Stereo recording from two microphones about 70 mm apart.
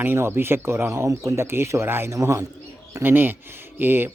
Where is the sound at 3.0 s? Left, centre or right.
Right.